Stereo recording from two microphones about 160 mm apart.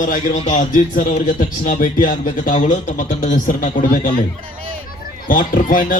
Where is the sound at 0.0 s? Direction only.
55° left (ahead or behind).